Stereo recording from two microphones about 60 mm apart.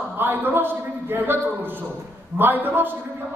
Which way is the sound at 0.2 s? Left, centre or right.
Right.